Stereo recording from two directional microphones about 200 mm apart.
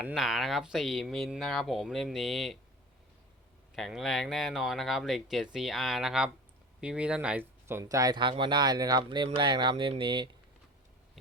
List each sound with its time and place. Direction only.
0.0 s speech: centre (ahead or behind)
3.8 s speech: centre (ahead or behind); by 10.2 s 25° right (ahead or behind)